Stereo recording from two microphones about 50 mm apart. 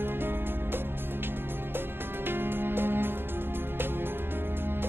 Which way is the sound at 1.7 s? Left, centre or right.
Right.